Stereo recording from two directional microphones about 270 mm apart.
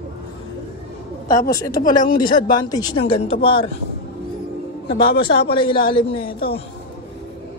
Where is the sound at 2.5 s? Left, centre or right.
Centre.